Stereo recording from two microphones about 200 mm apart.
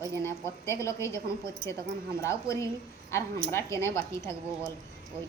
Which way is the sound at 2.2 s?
15° left (ahead or behind).